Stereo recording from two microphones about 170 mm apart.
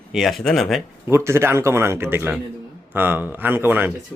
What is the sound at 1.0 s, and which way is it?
Speech, 15° right (ahead or behind).